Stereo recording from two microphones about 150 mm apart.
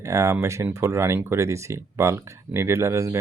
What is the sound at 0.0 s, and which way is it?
Speech, 20° right (ahead or behind).